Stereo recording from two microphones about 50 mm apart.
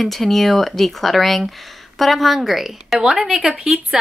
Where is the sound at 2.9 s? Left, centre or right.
Centre.